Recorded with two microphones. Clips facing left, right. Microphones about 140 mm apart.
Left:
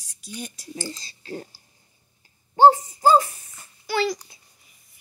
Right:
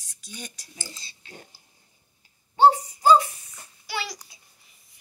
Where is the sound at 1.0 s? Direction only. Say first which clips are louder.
Left 11 dB; 40° left (ahead or behind).